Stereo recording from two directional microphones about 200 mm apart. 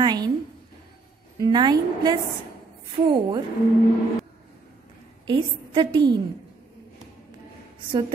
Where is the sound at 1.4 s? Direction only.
20° right (ahead or behind).